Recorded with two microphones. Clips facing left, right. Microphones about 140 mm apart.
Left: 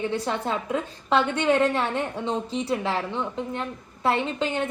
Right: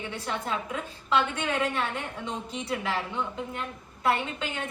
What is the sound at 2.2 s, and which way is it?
A woman's voice, 30° left (ahead or behind).